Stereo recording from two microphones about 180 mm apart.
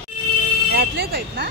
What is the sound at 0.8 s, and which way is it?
Speech, 60° right (ahead or behind).